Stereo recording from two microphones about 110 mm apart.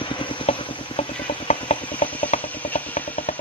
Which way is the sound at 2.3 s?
90° left.